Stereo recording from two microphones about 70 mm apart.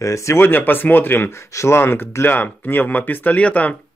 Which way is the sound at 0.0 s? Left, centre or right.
Left.